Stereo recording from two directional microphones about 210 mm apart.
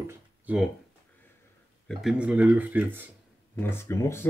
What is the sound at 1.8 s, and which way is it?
Speech, 5° right (ahead or behind).